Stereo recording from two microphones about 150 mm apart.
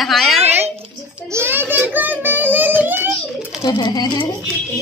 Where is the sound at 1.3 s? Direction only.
15° right (ahead or behind).